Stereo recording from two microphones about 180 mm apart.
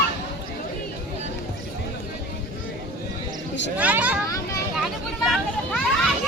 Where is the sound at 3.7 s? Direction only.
10° right (ahead or behind).